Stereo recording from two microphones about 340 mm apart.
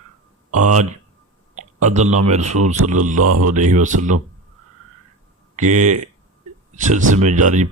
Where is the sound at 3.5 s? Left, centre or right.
Right.